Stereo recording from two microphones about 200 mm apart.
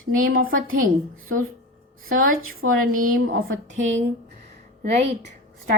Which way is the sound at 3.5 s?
75° right (ahead or behind).